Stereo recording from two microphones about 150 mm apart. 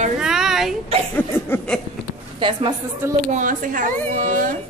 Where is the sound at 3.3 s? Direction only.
60° right (ahead or behind).